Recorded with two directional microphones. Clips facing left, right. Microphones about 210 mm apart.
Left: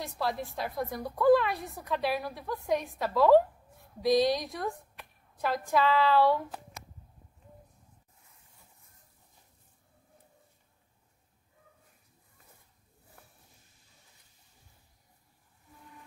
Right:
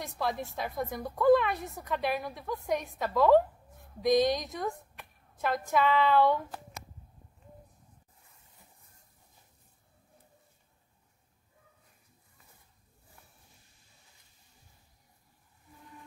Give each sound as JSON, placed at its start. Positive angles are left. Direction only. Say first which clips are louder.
{"t": 0.0, "sound": "a woman's voice", "louder": "even", "side_deg": 0}
{"t": 4.0, "sound": "speech", "louder": "even", "side_deg": -20}
{"t": 4.5, "sound": "a woman's voice", "louder": "even", "side_deg": 0}